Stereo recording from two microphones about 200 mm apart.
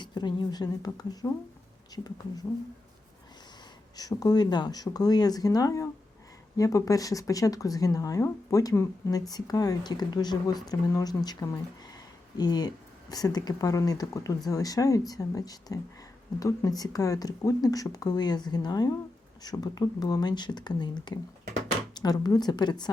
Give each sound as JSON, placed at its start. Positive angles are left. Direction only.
{"t": 0.0, "sound": "speech", "side_deg": 20}
{"t": 3.9, "sound": "speech", "side_deg": 20}